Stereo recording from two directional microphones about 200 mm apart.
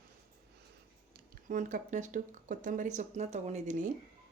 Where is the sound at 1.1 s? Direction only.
40° right (ahead or behind).